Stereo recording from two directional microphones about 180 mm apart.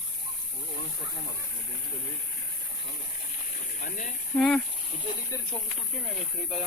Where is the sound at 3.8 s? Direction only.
45° left (ahead or behind).